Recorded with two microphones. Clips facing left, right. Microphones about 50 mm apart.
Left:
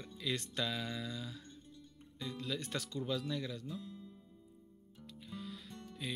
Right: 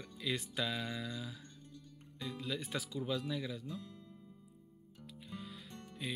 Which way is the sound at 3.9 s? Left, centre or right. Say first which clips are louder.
Left 3 dB; right.